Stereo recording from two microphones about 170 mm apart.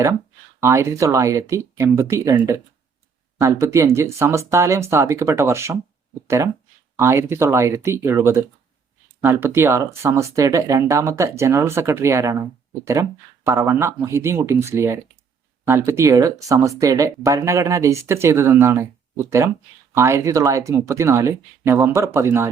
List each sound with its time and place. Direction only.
0.6 s speech: 15° right (ahead or behind)